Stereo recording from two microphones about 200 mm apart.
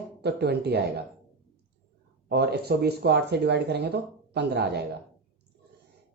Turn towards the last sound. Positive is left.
turn(degrees=-55)  # may be behind; listen again after turning